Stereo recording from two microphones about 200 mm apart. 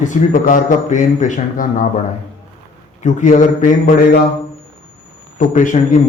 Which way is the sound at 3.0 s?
40° left (ahead or behind).